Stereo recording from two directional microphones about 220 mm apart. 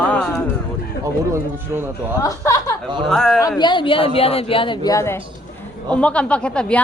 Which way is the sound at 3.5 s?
20° left (ahead or behind).